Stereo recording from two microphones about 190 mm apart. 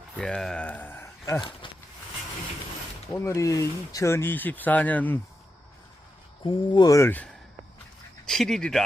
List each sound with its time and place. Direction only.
0.2 s speech: 5° left (ahead or behind); by 1.7 s 25° left (ahead or behind)
3.1 s speech: 15° left (ahead or behind)
6.4 s speech: 25° left (ahead or behind)
8.3 s speech: centre (ahead or behind)